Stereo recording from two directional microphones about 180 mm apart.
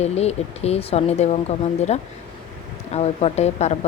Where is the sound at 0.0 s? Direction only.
35° left (ahead or behind).